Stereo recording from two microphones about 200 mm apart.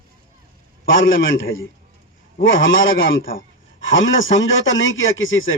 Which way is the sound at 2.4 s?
70° left (ahead or behind).